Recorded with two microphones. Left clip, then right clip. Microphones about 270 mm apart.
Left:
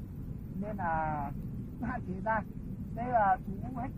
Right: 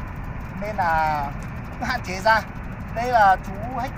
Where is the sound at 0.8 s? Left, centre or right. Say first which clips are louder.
Right 11 dB; centre.